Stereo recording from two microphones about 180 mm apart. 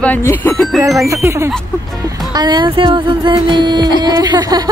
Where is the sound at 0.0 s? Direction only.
10° left (ahead or behind).